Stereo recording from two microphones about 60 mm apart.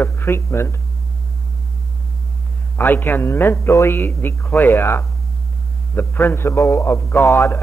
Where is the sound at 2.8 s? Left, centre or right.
Left.